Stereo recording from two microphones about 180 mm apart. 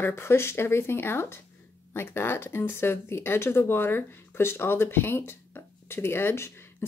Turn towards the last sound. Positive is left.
turn(degrees=15)  # may be behind; listen again after turning